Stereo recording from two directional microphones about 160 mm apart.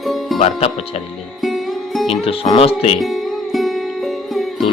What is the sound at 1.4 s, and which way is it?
Music, centre (ahead or behind).